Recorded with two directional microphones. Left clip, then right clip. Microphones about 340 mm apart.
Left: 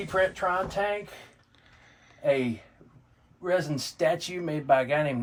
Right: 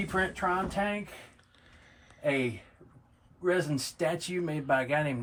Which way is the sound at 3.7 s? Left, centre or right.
Centre.